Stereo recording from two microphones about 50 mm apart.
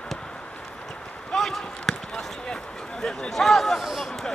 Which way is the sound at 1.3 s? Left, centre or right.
Centre.